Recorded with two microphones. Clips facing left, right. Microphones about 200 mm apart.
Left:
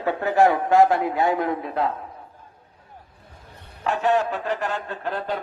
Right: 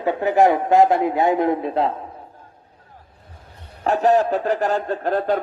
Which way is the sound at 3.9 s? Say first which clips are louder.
Right 5 dB; 40° right (ahead or behind).